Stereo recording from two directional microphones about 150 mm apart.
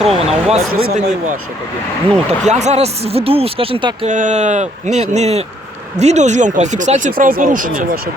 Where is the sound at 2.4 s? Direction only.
50° right (ahead or behind).